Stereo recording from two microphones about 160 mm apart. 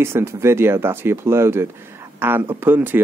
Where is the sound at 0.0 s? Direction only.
15° right (ahead or behind).